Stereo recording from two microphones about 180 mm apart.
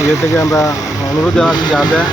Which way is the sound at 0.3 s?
20° left (ahead or behind).